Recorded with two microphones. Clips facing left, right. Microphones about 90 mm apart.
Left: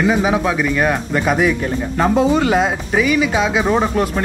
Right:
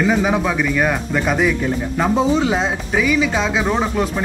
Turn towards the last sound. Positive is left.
turn(degrees=5)  # may be behind; listen again after turning